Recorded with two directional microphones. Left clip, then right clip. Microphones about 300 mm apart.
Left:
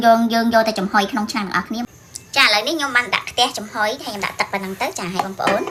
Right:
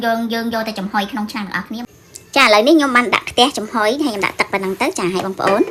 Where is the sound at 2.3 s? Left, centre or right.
Centre.